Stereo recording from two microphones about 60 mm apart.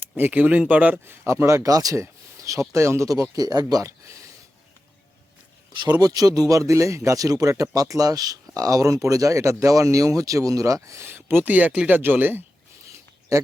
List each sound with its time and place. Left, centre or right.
0.2 s speech: right
1.6 s speech: right
3.1 s speech: right
5.9 s speech: right
8.5 s speech: right
11.0 s speech: right
11.9 s speech: right